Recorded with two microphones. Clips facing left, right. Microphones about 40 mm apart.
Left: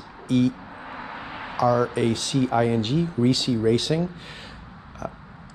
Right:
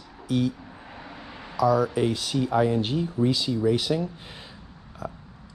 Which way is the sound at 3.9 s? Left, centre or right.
Left.